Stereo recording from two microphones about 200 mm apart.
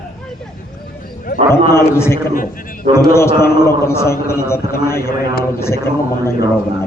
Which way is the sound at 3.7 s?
15° left (ahead or behind).